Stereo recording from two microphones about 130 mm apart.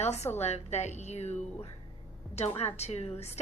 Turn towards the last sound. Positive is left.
turn(degrees=55)  # may be behind; listen again after turning